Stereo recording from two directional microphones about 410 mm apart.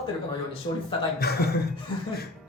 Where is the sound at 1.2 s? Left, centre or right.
Left.